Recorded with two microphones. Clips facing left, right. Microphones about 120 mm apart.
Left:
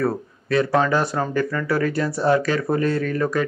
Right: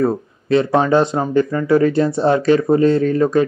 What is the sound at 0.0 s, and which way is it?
Speech, 25° right (ahead or behind).